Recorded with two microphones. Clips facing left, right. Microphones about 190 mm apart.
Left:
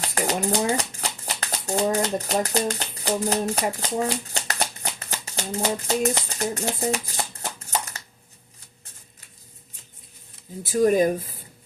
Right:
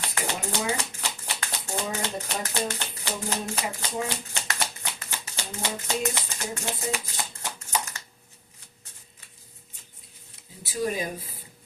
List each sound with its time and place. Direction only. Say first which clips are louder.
0.1 s shuffling cards: left 9 dB; 40° left (ahead or behind)
10.6 s speech: left 10 dB; 50° left (ahead or behind)